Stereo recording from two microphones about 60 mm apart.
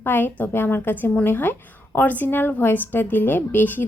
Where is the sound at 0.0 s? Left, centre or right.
Left.